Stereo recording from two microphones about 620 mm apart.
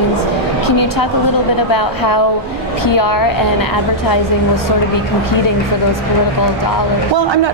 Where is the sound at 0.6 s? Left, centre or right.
Left.